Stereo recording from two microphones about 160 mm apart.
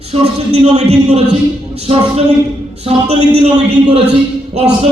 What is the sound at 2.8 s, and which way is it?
Speech, 40° right (ahead or behind).